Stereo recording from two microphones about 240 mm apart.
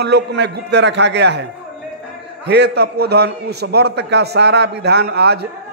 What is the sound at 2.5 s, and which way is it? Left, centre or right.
A man's voice, right.